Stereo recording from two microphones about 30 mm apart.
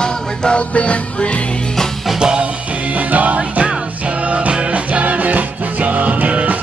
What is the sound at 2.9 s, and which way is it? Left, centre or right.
Music, right.